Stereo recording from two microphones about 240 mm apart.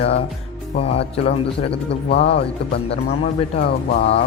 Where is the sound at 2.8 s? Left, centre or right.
Left.